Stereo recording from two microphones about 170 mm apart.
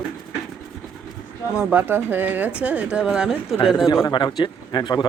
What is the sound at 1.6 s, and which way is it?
Speech, 10° right (ahead or behind).